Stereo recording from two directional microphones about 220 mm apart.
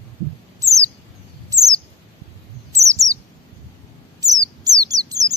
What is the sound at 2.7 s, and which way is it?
Chirp, 15° right (ahead or behind).